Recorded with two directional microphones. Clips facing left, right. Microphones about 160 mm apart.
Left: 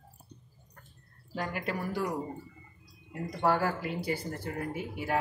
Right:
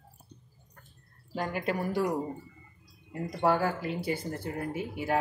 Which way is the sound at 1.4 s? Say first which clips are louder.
Right 3 dB; 25° right (ahead or behind).